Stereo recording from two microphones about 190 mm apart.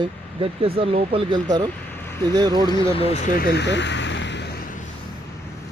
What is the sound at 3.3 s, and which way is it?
Speech, 50° left (ahead or behind).